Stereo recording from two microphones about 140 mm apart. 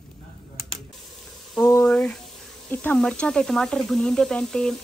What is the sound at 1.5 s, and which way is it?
Sizzle, 20° left (ahead or behind).